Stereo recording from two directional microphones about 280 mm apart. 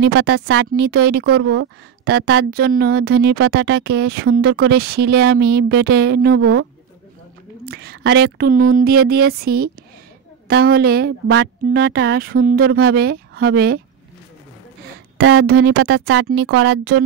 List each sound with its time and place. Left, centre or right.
0.0 s speech: right
1.2 s speech: right
2.0 s speech: right
6.4 s speech: right
7.6 s speech: right
12.6 s speech: right
12.9 s speech: right
15.1 s speech: right
15.8 s speech: right